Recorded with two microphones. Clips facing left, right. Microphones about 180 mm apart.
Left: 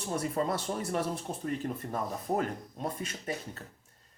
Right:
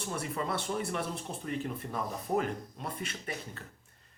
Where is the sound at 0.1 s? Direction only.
40° left (ahead or behind).